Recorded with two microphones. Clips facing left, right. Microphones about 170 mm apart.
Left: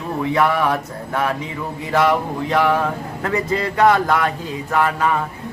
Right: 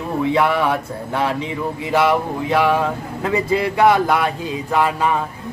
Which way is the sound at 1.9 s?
10° right (ahead or behind).